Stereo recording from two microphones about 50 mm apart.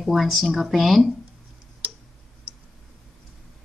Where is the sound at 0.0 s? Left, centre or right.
Centre.